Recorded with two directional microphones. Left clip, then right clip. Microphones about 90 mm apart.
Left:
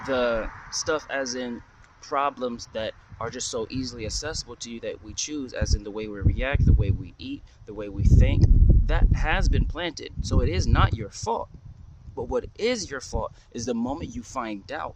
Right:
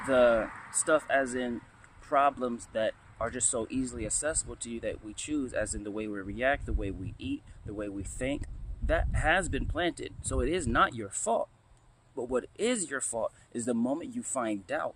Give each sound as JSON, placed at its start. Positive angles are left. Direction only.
{"t": 0.1, "sound": "speech", "side_deg": 40}
{"t": 0.4, "sound": "a sound", "side_deg": 10}
{"t": 0.9, "sound": "speech", "side_deg": 35}
{"t": 1.5, "sound": "a sound", "side_deg": 25}
{"t": 2.7, "sound": "speech", "side_deg": 50}
{"t": 8.9, "sound": "speech", "side_deg": 35}
{"t": 13.6, "sound": "speech", "side_deg": 65}
{"t": 14.4, "sound": "speech", "side_deg": 50}